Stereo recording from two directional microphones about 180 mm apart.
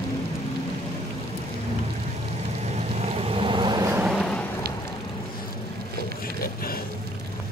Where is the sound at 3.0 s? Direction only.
30° right (ahead or behind).